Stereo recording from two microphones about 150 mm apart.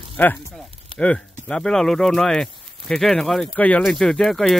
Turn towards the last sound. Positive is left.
turn(degrees=0)  # may be behind; listen again after turning